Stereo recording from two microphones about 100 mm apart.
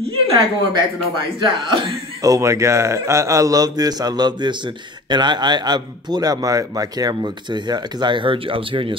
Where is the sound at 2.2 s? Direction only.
35° right (ahead or behind).